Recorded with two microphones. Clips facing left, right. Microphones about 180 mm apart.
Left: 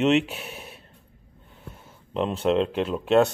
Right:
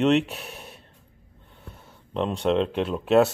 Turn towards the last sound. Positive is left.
turn(degrees=0)  # may be behind; listen again after turning